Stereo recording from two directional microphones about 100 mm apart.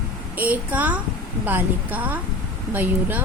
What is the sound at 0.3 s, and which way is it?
A woman's voice, 15° right (ahead or behind).